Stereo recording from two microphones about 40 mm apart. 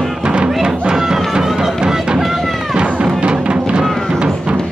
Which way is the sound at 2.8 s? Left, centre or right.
Right.